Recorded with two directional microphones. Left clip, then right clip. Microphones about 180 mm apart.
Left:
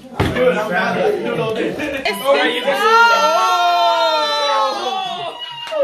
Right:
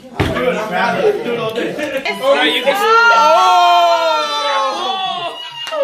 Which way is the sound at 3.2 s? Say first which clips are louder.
Right 5 dB; 25° right (ahead or behind).